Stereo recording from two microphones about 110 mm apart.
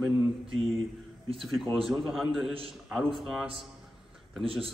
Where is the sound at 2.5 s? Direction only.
55° right (ahead or behind).